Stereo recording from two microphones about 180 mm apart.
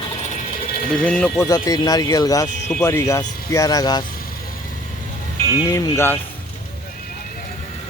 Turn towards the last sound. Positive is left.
turn(degrees=15)  # may be behind; listen again after turning